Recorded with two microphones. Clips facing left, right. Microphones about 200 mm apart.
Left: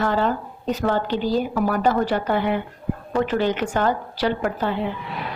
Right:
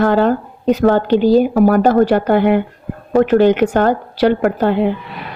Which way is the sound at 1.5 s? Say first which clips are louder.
Right 9 dB; 50° right (ahead or behind).